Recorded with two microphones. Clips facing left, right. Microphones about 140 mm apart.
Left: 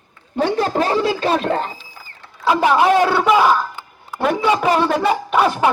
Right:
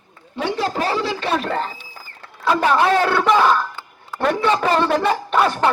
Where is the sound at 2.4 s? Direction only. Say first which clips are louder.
Left 2 dB; 15° left (ahead or behind).